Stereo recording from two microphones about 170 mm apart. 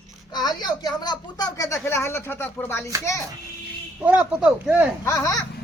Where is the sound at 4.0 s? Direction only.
10° right (ahead or behind).